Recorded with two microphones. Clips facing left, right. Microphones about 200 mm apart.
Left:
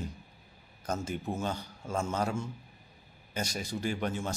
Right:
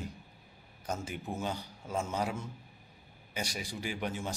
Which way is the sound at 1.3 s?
15° right (ahead or behind).